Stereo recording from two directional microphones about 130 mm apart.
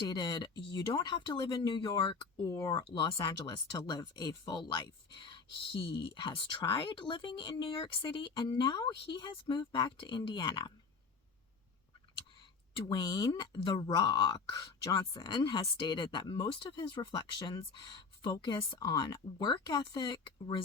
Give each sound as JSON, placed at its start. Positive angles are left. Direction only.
{"t": 0.0, "sound": "speech", "side_deg": 35}
{"t": 12.8, "sound": "speech", "side_deg": 30}